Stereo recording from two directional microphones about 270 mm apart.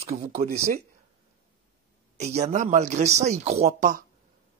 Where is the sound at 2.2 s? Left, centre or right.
Right.